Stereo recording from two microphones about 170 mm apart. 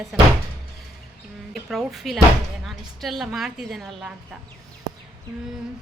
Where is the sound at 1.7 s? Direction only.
Centre (ahead or behind).